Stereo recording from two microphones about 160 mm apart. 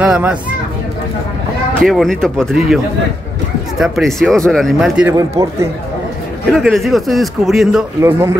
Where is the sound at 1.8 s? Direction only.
Centre (ahead or behind).